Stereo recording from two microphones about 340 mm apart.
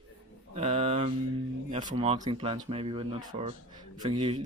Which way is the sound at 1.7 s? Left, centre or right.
Centre.